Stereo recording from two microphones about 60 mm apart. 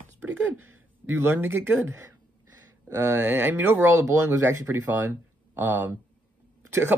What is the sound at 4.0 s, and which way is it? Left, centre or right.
Speech, right.